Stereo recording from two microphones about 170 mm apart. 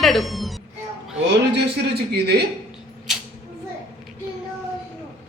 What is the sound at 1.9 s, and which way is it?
Speech, 70° right (ahead or behind).